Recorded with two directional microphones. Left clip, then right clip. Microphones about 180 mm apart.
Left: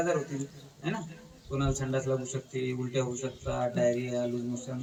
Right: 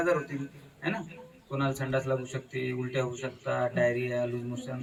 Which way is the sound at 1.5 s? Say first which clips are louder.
Right 2 dB; 20° right (ahead or behind).